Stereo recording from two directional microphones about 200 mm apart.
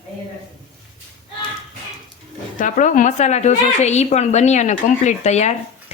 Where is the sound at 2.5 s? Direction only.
40° left (ahead or behind).